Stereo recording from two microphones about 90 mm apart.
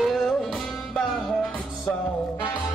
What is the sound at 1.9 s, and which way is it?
Music, 15° left (ahead or behind).